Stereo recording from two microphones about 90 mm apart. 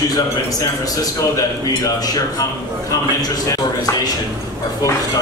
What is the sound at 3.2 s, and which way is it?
Speech, 45° left (ahead or behind).